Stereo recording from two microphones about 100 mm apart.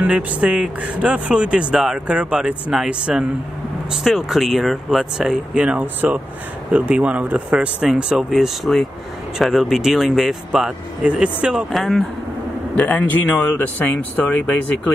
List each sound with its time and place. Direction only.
0.0 s speech: 10° right (ahead or behind)
11.7 s speech: centre (ahead or behind)
12.7 s speech: 15° left (ahead or behind)